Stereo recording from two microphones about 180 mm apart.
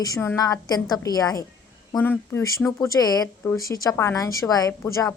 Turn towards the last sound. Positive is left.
turn(degrees=20)  # may be behind; listen again after turning